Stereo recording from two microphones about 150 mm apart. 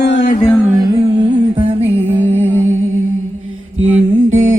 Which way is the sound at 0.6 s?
25° right (ahead or behind).